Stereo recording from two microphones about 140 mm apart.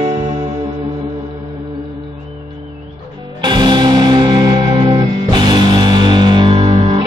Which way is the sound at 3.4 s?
30° right (ahead or behind).